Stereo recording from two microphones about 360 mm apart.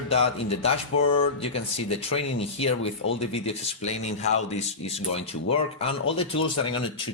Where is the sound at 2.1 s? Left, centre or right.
Centre.